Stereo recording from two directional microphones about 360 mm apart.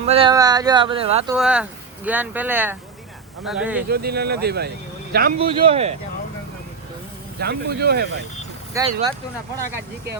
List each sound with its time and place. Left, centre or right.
0.0 s speech: centre
1.4 s speech: centre
3.8 s speech: right
7.3 s speech: right
8.7 s speech: centre